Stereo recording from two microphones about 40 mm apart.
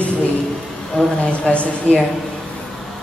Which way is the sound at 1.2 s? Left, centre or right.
Left.